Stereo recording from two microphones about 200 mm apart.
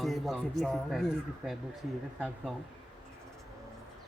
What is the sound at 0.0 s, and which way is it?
Speech, centre (ahead or behind).